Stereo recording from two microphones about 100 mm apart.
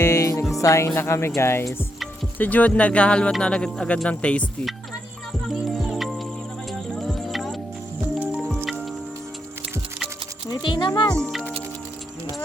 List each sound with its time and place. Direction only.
0.0 s music: 30° left (ahead or behind)
0.6 s speech: 30° left (ahead or behind); by 4.4 s 10° left (ahead or behind)
5.6 s music: centre (ahead or behind)
10.5 s speech: 50° left (ahead or behind)
11.1 s speech: 5° left (ahead or behind)